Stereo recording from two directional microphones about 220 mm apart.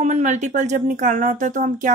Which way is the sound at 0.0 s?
30° right (ahead or behind).